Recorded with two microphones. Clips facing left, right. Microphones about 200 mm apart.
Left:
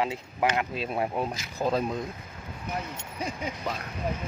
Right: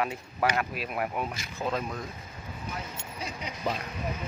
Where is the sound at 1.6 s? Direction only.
40° left (ahead or behind).